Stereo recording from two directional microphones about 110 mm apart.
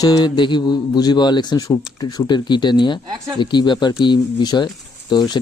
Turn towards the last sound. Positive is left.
turn(degrees=40)  # may be behind; listen again after turning